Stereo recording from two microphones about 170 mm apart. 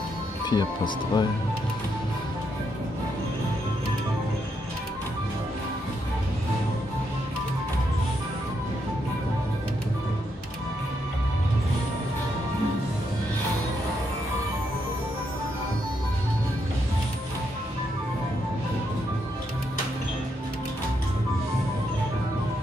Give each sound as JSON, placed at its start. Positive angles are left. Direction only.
{"t": 0.5, "sound": "speech", "side_deg": 25}